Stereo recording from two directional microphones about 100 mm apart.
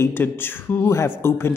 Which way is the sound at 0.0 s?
20° left (ahead or behind).